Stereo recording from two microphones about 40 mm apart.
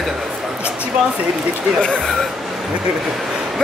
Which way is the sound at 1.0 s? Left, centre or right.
Right.